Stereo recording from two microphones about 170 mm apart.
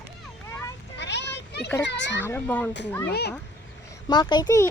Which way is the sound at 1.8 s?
90° left.